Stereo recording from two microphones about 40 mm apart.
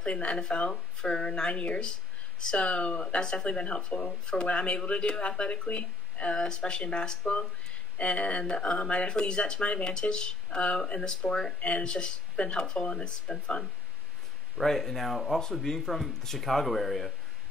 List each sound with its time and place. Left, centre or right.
0.0 s speech: left
3.2 s speech: centre
6.3 s speech: left
14.6 s speech: centre